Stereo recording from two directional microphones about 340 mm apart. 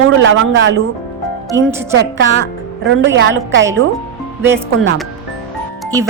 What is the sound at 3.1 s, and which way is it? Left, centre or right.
Speech, right.